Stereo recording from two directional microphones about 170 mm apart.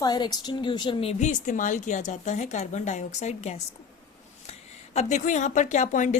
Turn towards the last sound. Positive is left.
turn(degrees=45)  # may be behind; listen again after turning